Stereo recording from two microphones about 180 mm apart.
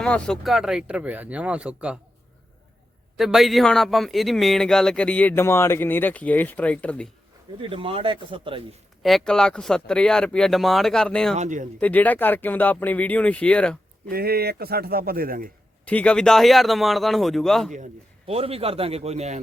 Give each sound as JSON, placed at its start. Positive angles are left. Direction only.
{"t": 0.0, "sound": "speech", "side_deg": 5}
{"t": 3.2, "sound": "speech", "side_deg": 0}
{"t": 7.6, "sound": "speech", "side_deg": -30}
{"t": 9.0, "sound": "speech", "side_deg": 0}
{"t": 11.3, "sound": "speech", "side_deg": -45}
{"t": 11.8, "sound": "speech", "side_deg": 10}
{"t": 14.1, "sound": "a man's voice", "side_deg": -60}
{"t": 15.9, "sound": "speech", "side_deg": 5}
{"t": 17.7, "sound": "a man's voice", "side_deg": -40}